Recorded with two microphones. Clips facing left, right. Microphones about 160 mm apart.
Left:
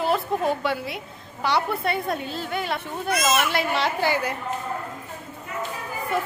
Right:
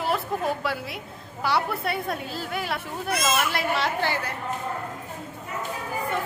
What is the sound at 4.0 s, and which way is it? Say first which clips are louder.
Speech: left 4 dB; 15° left (ahead or behind).